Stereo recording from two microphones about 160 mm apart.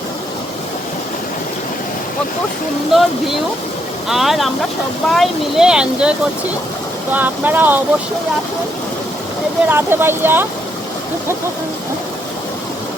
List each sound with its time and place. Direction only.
2.9 s speech: centre (ahead or behind)
9.6 s speech: 15° right (ahead or behind)